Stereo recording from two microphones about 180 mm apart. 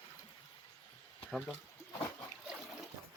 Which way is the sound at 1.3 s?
Centre (ahead or behind).